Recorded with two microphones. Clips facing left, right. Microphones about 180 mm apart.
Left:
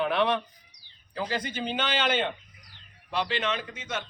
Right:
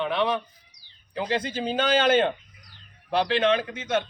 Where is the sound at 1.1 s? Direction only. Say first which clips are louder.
Right 4 dB; 25° right (ahead or behind); by 2.3 s 45° right (ahead or behind).